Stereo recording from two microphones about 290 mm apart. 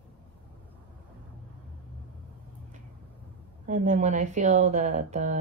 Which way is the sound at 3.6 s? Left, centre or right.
Right.